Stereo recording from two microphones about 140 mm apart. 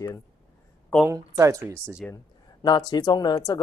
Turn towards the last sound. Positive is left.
turn(degrees=25)  # may be behind; listen again after turning